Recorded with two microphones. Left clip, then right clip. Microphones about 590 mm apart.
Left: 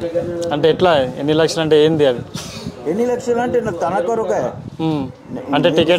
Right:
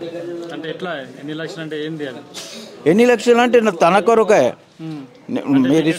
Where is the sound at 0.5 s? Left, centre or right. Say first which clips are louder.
Left 16 dB; left.